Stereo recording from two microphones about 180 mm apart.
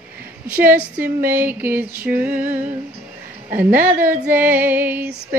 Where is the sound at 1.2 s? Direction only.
10° right (ahead or behind).